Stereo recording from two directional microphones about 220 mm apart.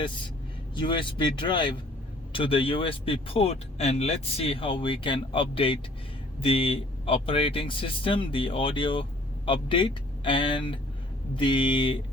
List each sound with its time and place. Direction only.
0.8 s speech: 20° left (ahead or behind)